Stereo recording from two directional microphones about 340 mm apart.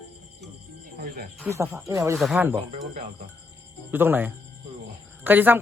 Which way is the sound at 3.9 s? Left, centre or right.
Centre.